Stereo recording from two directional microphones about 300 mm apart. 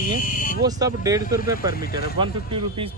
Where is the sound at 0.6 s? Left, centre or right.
Centre.